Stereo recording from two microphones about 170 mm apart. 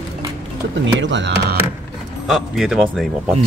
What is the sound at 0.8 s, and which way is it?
Speech, 90° right.